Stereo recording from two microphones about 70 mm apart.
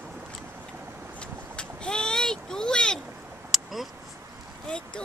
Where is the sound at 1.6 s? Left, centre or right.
Centre.